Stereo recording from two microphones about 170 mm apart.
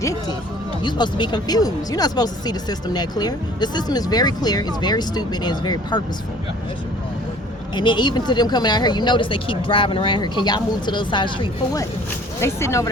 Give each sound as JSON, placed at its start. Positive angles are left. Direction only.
{"t": 0.0, "sound": "speech", "side_deg": 20}
{"t": 7.8, "sound": "speech", "side_deg": 25}